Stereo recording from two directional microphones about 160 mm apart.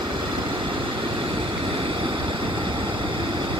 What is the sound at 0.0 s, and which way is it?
Vehicle, 30° right (ahead or behind).